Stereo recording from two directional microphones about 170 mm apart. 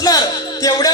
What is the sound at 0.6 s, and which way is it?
Speech, 25° left (ahead or behind).